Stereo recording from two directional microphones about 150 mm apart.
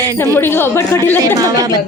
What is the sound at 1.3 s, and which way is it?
Speech, 25° right (ahead or behind).